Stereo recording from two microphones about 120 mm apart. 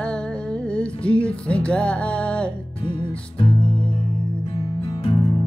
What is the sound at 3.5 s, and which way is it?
Music, 10° left (ahead or behind).